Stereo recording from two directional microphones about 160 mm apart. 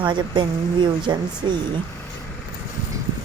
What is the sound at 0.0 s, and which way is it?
Speech, 30° right (ahead or behind).